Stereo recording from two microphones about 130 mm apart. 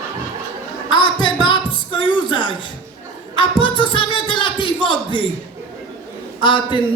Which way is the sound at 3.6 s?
40° left (ahead or behind).